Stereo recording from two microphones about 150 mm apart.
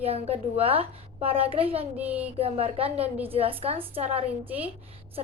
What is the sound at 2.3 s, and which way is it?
A woman's voice, 40° right (ahead or behind).